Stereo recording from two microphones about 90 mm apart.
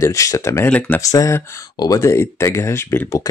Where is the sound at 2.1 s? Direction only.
30° left (ahead or behind).